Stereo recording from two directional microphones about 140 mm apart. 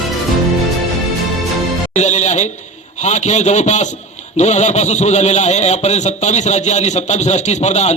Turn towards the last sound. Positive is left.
turn(degrees=50)  # may be behind; listen again after turning